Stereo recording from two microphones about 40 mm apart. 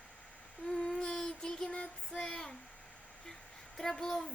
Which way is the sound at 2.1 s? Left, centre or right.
Centre.